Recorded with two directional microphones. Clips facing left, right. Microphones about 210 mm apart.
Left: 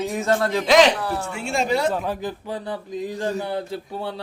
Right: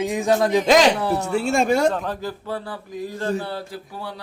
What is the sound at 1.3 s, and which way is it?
Speech, 40° right (ahead or behind).